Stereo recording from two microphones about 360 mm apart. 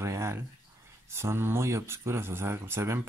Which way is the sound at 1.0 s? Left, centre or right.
Centre.